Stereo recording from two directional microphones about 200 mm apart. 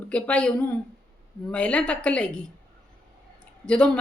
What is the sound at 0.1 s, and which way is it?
A woman's voice, 5° left (ahead or behind).